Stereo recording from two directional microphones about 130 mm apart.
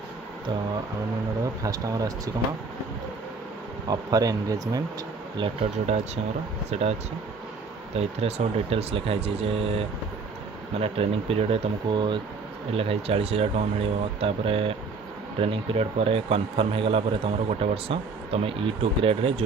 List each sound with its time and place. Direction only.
1.6 s speech: 25° right (ahead or behind)
3.8 s speech: 30° right (ahead or behind)
5.7 s speech: 55° right (ahead or behind)
7.9 s a man's voice: 55° right (ahead or behind); by 12.2 s 35° right (ahead or behind)
12.7 s a man's voice: 50° right (ahead or behind)